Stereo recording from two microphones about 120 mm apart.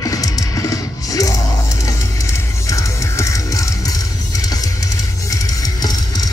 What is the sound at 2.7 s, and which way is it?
Music, 25° left (ahead or behind).